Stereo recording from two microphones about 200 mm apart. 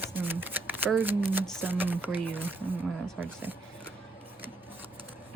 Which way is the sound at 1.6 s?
10° right (ahead or behind).